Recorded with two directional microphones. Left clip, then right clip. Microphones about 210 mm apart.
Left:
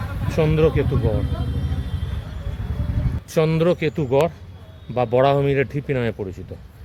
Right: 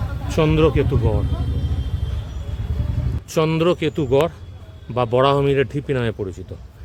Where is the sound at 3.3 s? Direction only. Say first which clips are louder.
Right 1 dB; 5° right (ahead or behind).